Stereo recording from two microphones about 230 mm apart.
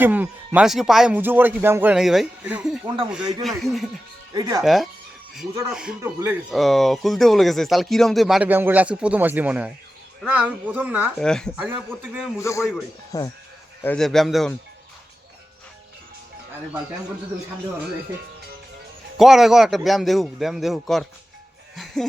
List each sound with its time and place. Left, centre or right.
0.0 s speech: centre
2.8 s speech: right
3.4 s speech: centre
4.4 s speech: centre
4.6 s speech: centre
12.4 s a man's voice: centre
13.8 s speech: centre
19.1 s speech: centre